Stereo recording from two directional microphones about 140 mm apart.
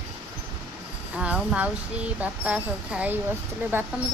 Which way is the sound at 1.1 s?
10° right (ahead or behind).